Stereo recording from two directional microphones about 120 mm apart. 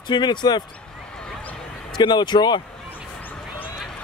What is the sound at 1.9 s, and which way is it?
Speech, 40° left (ahead or behind).